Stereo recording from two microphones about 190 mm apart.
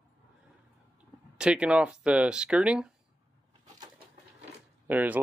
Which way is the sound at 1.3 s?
5° right (ahead or behind).